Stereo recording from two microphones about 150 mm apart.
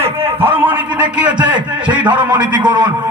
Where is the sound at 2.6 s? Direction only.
30° right (ahead or behind).